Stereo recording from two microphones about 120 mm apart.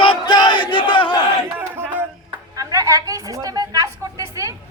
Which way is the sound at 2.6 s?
30° right (ahead or behind).